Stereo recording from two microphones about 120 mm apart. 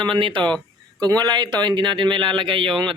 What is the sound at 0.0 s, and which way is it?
Speech, 45° right (ahead or behind).